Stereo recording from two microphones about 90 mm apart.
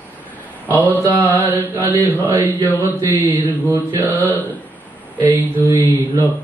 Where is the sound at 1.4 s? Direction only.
20° right (ahead or behind).